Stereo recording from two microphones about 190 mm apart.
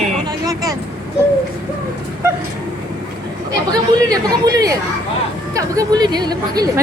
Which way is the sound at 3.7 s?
20° right (ahead or behind).